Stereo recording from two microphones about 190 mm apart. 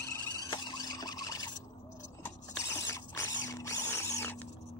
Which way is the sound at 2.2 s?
15° left (ahead or behind).